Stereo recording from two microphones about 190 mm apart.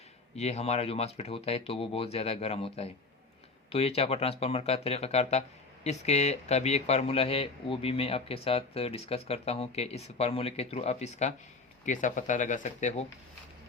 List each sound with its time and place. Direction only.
0.3 s speech: 35° left (ahead or behind)